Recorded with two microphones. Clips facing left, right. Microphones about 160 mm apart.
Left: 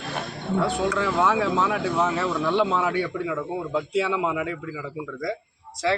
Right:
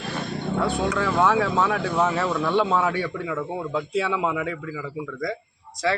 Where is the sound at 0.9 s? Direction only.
10° left (ahead or behind).